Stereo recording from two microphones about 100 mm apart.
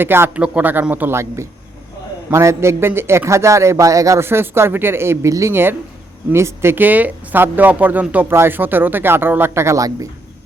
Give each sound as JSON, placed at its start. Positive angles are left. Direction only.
{"t": 0.0, "sound": "a man's voice", "side_deg": -20}